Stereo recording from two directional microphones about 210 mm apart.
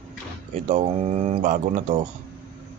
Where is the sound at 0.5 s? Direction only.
35° right (ahead or behind).